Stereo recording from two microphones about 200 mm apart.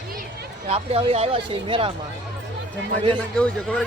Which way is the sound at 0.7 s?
30° right (ahead or behind).